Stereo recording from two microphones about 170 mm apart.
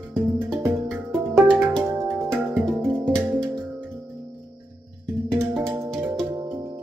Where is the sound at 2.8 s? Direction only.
10° right (ahead or behind).